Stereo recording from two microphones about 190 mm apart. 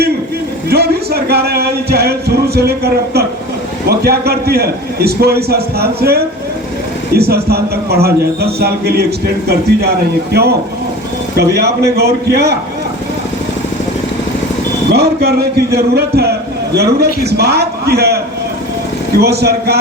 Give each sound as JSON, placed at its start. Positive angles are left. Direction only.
{"t": 0.7, "sound": "a man's voice", "side_deg": -55}
{"t": 14.9, "sound": "a man's voice", "side_deg": -60}
{"t": 19.2, "sound": "a man's voice", "side_deg": -55}